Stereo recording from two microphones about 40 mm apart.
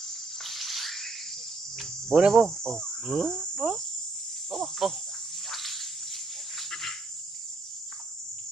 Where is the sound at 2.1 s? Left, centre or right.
Centre.